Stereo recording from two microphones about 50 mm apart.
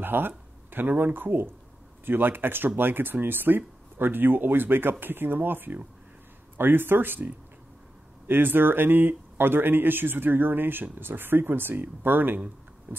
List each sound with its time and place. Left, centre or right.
0.0 s speech: right